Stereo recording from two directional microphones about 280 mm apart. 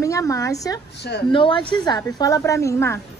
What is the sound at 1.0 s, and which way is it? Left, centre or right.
Speech, left.